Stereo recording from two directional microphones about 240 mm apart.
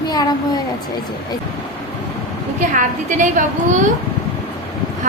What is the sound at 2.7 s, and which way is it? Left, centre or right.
Speech, right.